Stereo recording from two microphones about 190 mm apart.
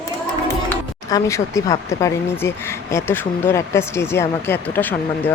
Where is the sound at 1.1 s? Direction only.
15° left (ahead or behind).